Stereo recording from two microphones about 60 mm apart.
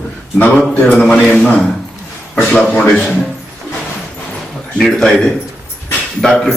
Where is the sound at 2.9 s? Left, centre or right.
Centre.